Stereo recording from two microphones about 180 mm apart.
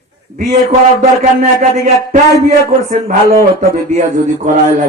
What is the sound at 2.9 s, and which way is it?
A man's voice, 55° right (ahead or behind).